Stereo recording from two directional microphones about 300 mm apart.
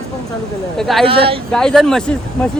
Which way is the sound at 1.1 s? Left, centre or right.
Centre.